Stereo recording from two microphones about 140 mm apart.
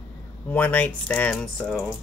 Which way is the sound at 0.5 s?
10° left (ahead or behind).